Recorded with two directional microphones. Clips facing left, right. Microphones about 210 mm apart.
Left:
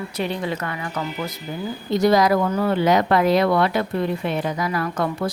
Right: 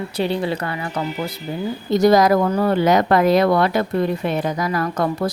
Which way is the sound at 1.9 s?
45° right (ahead or behind).